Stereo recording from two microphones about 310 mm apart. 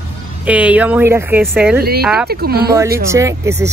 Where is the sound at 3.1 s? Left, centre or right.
Centre.